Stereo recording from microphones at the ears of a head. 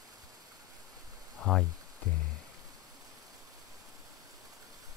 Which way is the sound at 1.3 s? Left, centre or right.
Left.